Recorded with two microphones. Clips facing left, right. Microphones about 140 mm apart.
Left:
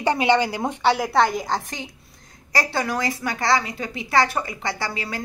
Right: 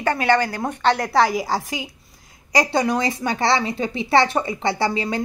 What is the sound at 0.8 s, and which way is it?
A woman's voice, 5° left (ahead or behind).